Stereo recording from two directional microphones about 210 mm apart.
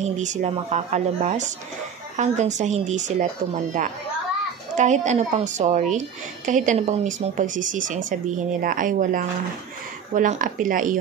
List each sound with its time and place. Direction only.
0.0 s a woman's voice: 35° right (ahead or behind)
4.7 s a woman's voice: 35° right (ahead or behind)